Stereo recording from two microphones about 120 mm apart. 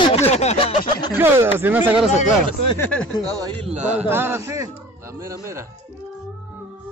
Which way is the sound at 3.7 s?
75° right (ahead or behind).